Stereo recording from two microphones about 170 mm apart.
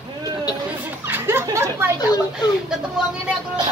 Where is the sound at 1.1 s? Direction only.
15° right (ahead or behind).